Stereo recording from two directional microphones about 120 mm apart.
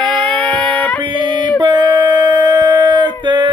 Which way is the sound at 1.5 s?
40° right (ahead or behind).